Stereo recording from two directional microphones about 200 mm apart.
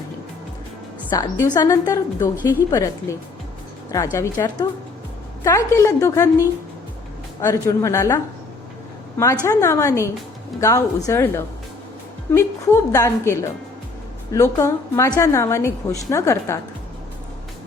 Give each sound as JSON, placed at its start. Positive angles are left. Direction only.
{"t": 1.1, "sound": "a woman's voice", "side_deg": 15}